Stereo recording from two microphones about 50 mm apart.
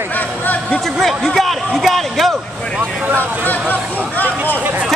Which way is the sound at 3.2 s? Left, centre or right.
Left.